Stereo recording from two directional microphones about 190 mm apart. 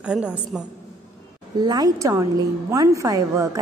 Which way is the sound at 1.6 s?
20° right (ahead or behind).